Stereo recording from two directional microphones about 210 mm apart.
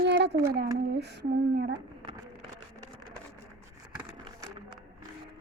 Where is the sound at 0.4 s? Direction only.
50° right (ahead or behind).